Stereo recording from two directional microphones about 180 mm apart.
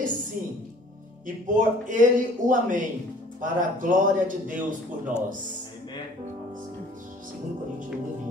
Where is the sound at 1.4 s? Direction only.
45° right (ahead or behind).